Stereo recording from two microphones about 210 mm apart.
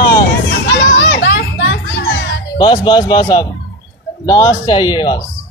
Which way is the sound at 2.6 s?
20° left (ahead or behind).